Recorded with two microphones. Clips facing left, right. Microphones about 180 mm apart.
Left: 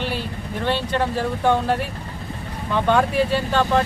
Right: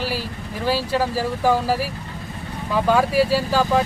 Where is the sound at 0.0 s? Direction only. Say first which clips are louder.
Even; 5° right (ahead or behind).